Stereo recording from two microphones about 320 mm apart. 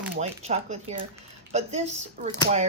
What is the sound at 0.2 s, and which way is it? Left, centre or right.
Speech, right.